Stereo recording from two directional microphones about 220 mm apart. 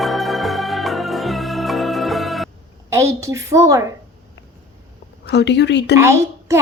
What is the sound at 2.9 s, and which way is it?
Speech, 15° right (ahead or behind).